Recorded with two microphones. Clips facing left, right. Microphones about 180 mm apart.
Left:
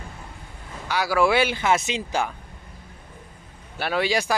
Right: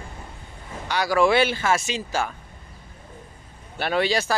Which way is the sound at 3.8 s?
10° left (ahead or behind).